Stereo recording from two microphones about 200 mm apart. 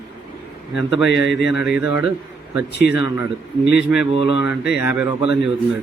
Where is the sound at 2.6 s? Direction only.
55° left (ahead or behind).